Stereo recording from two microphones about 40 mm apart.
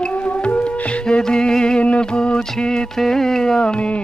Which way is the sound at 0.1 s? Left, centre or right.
Left.